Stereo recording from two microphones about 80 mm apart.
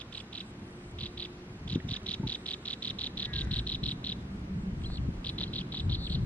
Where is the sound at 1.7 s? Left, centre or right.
Centre.